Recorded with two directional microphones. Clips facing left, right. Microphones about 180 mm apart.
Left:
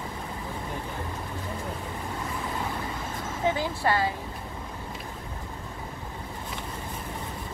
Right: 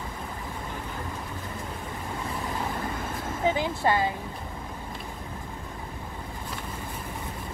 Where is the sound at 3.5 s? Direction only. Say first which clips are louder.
Right 1 dB; 20° right (ahead or behind).